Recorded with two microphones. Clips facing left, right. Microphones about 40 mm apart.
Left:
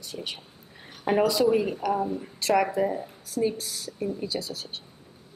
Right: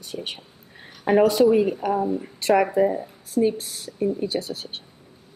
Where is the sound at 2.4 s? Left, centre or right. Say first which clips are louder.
Right 5 dB; right.